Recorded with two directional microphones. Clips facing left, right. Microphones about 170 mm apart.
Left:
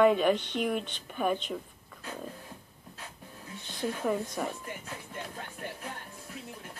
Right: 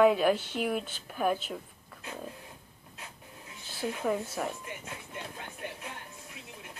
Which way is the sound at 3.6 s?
5° right (ahead or behind).